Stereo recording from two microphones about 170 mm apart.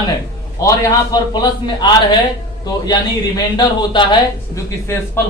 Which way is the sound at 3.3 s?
25° left (ahead or behind).